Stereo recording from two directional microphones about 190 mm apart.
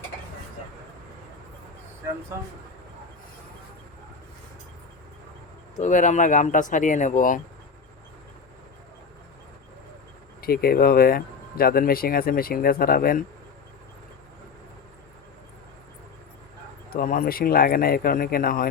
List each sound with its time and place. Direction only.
5.8 s speech: 40° left (ahead or behind)
10.4 s speech: 50° left (ahead or behind)
16.9 s speech: 45° left (ahead or behind)